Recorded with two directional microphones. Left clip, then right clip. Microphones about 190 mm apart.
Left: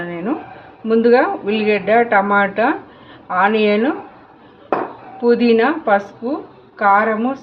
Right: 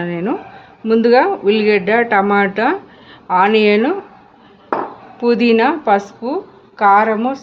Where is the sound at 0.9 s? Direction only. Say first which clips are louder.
Right 1 dB; 75° right (ahead or behind).